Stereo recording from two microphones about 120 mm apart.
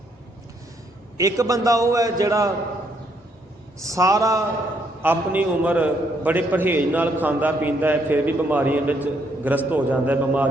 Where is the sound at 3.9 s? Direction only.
25° right (ahead or behind).